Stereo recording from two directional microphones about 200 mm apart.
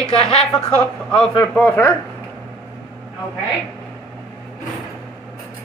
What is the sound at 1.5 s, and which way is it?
Speech, 5° left (ahead or behind).